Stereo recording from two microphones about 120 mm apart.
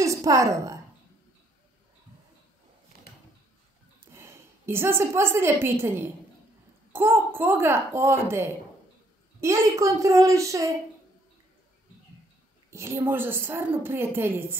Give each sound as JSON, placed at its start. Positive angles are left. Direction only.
{"t": 0.0, "sound": "a woman's voice", "side_deg": -25}
{"t": 4.1, "sound": "a woman's voice", "side_deg": -20}
{"t": 12.7, "sound": "a woman's voice", "side_deg": -25}